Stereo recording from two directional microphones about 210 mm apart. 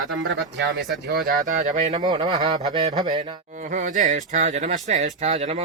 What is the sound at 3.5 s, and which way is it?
Speech, 35° right (ahead or behind).